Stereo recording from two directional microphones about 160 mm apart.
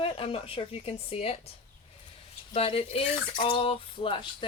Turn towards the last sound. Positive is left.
turn(degrees=30)  # may be behind; listen again after turning